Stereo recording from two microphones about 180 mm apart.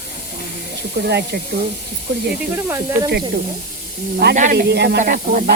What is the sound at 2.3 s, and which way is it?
Speech, 10° right (ahead or behind).